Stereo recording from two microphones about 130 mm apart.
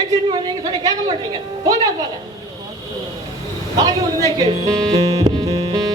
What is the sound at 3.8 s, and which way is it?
Speech, 30° right (ahead or behind).